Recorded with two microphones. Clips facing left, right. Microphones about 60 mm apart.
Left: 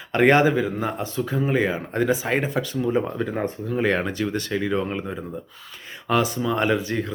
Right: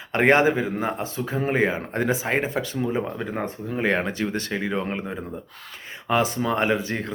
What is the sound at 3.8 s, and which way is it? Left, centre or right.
Speech, right.